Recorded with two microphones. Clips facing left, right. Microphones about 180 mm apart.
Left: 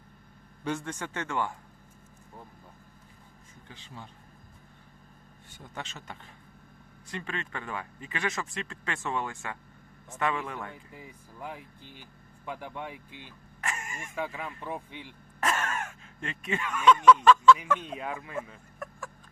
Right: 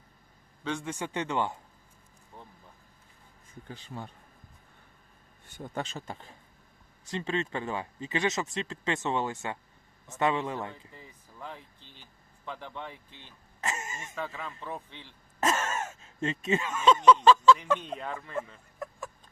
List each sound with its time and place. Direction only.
0.6 s a man's voice: 5° left (ahead or behind)
0.9 s speech: 15° right (ahead or behind)
3.7 s speech: 45° right (ahead or behind)
5.7 s a man's voice: 35° right (ahead or behind)
10.9 s speech: 10° left (ahead or behind)
13.6 s throat clearing: 25° right (ahead or behind)
14.2 s speech: 10° left (ahead or behind)
15.4 s speech: 25° right (ahead or behind)
17.7 s speech: 5° left (ahead or behind)
18.8 s a sound: 20° right (ahead or behind)